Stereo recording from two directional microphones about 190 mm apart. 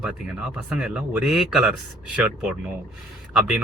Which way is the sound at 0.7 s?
5° right (ahead or behind).